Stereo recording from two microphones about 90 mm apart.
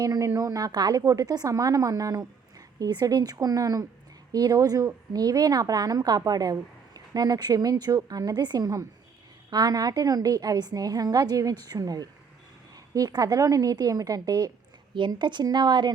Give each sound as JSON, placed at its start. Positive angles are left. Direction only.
{"t": 0.0, "sound": "a woman's voice", "side_deg": -40}
{"t": 14.9, "sound": "speech", "side_deg": -60}